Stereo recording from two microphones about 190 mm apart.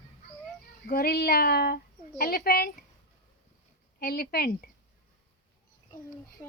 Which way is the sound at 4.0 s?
50° left (ahead or behind).